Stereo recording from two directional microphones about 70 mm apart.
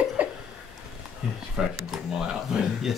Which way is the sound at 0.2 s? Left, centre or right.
Right.